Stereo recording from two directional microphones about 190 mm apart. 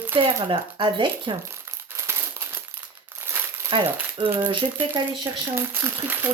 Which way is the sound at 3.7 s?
25° right (ahead or behind).